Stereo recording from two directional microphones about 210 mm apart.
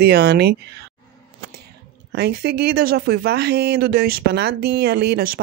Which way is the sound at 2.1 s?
50° right (ahead or behind).